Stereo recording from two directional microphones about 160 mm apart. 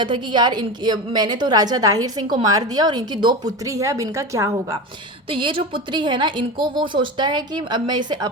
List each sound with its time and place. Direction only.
0.0 s a woman's voice: 30° right (ahead or behind)
5.3 s a woman's voice: 30° right (ahead or behind)